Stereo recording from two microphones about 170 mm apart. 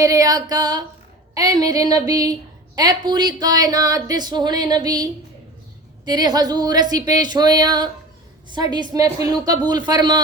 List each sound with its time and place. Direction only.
0.0 s speech: 20° right (ahead or behind)
6.1 s speech: 25° right (ahead or behind)